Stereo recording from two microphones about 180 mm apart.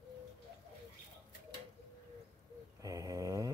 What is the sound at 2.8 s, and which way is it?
Snoring, 20° right (ahead or behind).